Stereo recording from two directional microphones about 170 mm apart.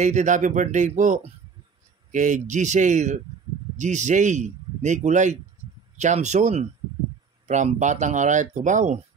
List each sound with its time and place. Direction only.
0.0 s speech: 45° right (ahead or behind)